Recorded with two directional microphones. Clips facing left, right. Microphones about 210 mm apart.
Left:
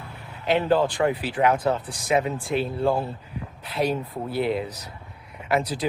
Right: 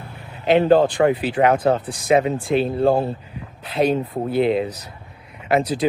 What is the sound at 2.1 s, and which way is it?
Speech, 90° right.